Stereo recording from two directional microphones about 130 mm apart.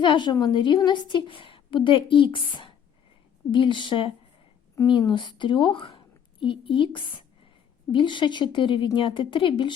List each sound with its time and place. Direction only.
0.0 s a woman's voice: 35° left (ahead or behind)